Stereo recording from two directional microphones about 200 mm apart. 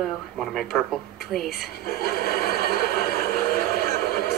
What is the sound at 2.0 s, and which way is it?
Neigh, 50° left (ahead or behind).